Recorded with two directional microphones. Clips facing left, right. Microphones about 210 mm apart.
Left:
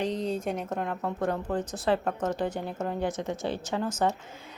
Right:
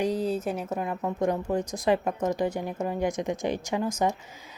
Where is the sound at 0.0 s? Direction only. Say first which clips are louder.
Right 3 dB; 5° right (ahead or behind).